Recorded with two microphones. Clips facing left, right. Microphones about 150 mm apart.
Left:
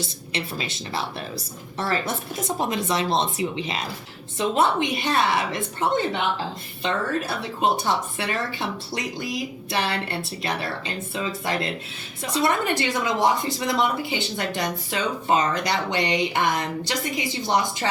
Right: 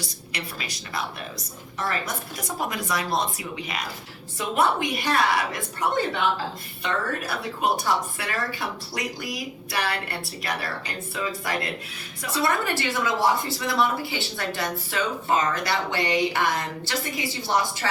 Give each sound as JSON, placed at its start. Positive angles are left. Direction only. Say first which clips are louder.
{"t": 0.0, "sound": "a woman's voice", "louder": "left 5 dB", "side_deg": 25}